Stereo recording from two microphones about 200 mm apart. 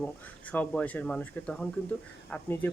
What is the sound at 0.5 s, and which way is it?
Speech, 5° left (ahead or behind).